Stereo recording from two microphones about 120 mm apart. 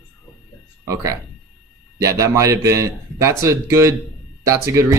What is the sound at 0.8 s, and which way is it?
Speech, 25° right (ahead or behind).